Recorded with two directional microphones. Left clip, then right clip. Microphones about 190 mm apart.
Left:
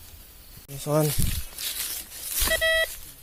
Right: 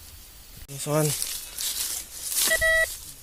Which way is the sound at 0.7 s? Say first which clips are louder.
Left 1 dB; 10° left (ahead or behind).